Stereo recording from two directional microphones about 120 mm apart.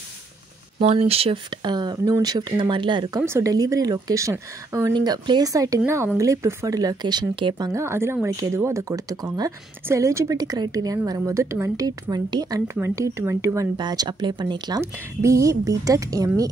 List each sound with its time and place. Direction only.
0.7 s speech: 55° right (ahead or behind); by 3.2 s 40° right (ahead or behind)
3.2 s a woman's voice: 20° right (ahead or behind)
4.9 s speech: 35° right (ahead or behind)
7.7 s a woman's voice: 20° right (ahead or behind)
13.7 s speech: 35° right (ahead or behind)
14.8 s a woman's voice: 25° right (ahead or behind)